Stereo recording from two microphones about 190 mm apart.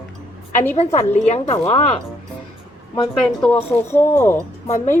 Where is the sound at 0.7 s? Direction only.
35° left (ahead or behind).